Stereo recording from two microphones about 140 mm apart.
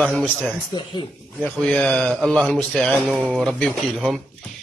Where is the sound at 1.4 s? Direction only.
5° left (ahead or behind).